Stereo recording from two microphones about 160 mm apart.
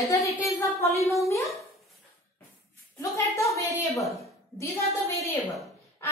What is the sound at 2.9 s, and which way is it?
A woman's voice, 20° left (ahead or behind).